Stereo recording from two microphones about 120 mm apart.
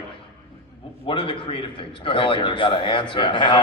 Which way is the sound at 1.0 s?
45° left (ahead or behind).